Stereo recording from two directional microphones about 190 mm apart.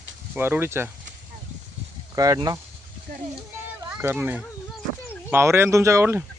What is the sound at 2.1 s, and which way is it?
Speech, 20° right (ahead or behind).